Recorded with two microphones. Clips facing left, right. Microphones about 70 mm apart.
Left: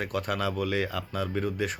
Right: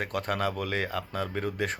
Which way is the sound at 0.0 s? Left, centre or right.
Right.